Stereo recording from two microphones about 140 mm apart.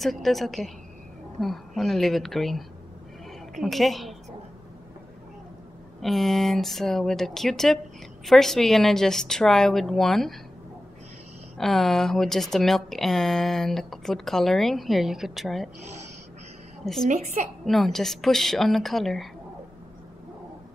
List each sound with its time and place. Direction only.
0.0 s speech: centre (ahead or behind)
3.6 s speech: centre (ahead or behind)
5.9 s speech: centre (ahead or behind)
11.5 s speech: centre (ahead or behind)
16.8 s speech: centre (ahead or behind)
17.1 s a woman's voice: 55° right (ahead or behind)
17.6 s speech: centre (ahead or behind)